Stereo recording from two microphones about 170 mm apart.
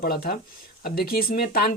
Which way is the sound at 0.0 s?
60° left (ahead or behind).